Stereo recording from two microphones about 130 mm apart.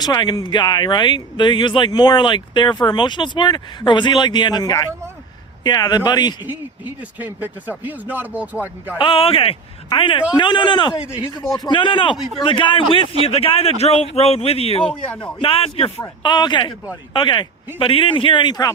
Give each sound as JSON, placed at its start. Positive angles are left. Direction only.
{"t": 0.0, "sound": "speech", "side_deg": 35}
{"t": 7.2, "sound": "speech", "side_deg": -15}
{"t": 9.0, "sound": "speech", "side_deg": 45}
{"t": 16.2, "sound": "speech", "side_deg": 35}